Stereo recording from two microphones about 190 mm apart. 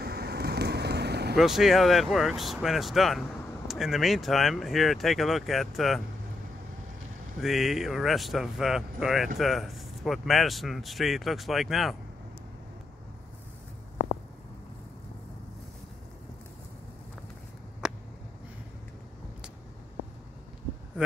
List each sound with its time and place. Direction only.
0.0 s vehicle: 55° right (ahead or behind)
1.3 s speech: centre (ahead or behind)
7.3 s speech: centre (ahead or behind)